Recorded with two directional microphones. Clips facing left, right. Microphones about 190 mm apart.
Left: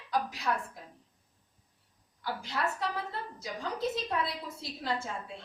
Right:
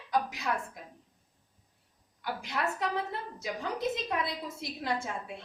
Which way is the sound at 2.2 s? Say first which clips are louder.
Even; 20° right (ahead or behind).